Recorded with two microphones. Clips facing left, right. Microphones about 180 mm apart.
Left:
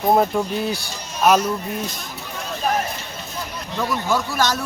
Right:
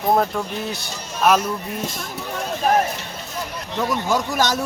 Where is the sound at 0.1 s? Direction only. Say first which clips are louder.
Left 2 dB; 10° left (ahead or behind).